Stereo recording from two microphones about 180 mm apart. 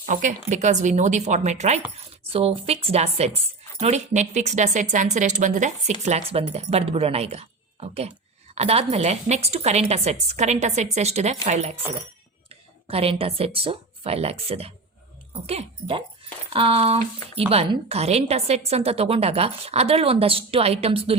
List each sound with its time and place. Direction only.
0.0 s a woman's voice: 45° right (ahead or behind)